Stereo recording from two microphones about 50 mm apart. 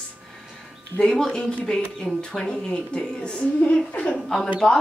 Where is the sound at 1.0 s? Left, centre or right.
Centre.